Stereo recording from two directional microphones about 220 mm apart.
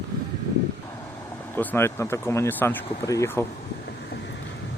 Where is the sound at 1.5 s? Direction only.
10° left (ahead or behind).